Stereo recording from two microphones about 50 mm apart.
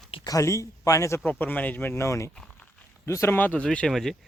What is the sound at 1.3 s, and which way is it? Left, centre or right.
Speech, left.